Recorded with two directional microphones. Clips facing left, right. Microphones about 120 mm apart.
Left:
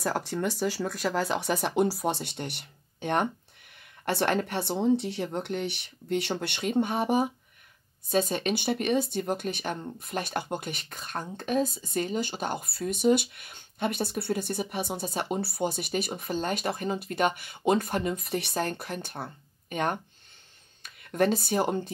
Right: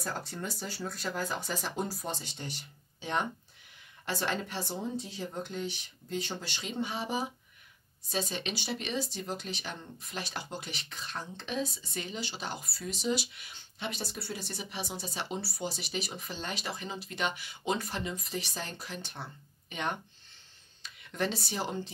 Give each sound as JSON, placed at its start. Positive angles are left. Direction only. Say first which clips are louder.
{"t": 0.0, "sound": "speech", "louder": "left 9 dB", "side_deg": 90}